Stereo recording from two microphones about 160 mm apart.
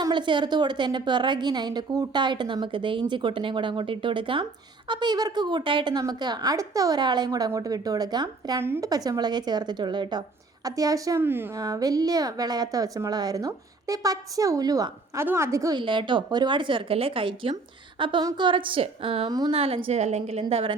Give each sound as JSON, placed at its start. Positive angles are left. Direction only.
{"t": 0.0, "sound": "speech", "side_deg": -30}
{"t": 15.8, "sound": "speech", "side_deg": -30}